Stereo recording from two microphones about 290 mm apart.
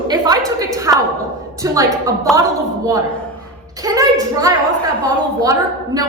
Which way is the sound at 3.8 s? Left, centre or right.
Centre.